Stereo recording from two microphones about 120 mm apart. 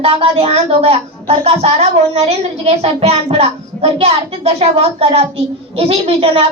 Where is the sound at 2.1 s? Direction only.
60° right (ahead or behind).